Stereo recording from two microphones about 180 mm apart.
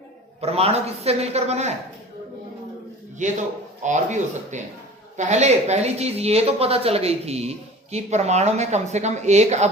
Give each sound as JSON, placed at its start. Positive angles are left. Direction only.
{"t": 0.4, "sound": "speech", "side_deg": -35}
{"t": 3.2, "sound": "a man's voice", "side_deg": -45}